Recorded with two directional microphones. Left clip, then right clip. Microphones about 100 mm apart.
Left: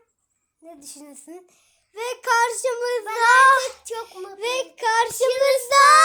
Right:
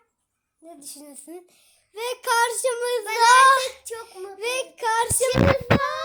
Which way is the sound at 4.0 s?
40° left (ahead or behind).